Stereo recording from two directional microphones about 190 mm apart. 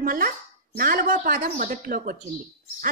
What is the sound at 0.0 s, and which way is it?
A woman's voice, 50° right (ahead or behind).